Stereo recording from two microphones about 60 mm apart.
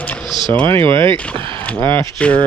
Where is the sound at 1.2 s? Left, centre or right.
Left.